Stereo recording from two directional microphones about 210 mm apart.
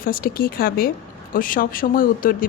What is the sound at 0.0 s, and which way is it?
A woman's voice, 45° left (ahead or behind).